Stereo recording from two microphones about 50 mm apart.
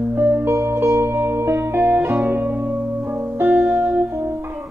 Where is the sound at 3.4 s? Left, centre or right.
Right.